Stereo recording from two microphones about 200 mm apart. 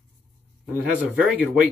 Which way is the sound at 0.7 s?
10° right (ahead or behind).